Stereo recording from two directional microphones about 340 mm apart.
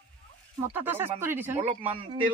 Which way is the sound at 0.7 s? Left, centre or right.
Centre.